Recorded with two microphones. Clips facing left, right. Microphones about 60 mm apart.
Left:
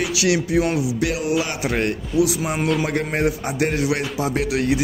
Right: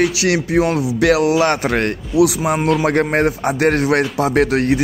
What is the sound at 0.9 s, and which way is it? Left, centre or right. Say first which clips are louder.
Music: right 9 dB; right.